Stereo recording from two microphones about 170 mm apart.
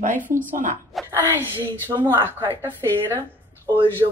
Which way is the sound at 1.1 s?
15° right (ahead or behind).